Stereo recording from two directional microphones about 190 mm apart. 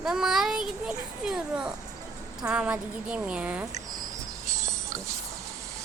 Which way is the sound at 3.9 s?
20° right (ahead or behind).